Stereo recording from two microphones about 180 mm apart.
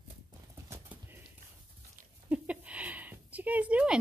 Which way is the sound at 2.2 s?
5° right (ahead or behind).